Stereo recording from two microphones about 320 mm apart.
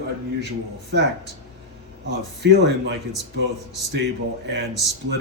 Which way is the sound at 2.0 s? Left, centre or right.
Right.